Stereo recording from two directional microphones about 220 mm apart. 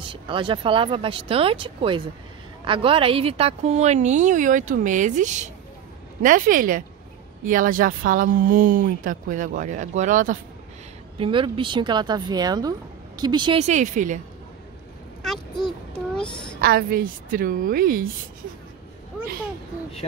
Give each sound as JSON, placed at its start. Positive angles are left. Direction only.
{"t": 0.0, "sound": "speech", "side_deg": -20}
{"t": 11.1, "sound": "speech", "side_deg": -20}
{"t": 16.3, "sound": "a woman's voice", "side_deg": 20}
{"t": 16.6, "sound": "speech", "side_deg": -45}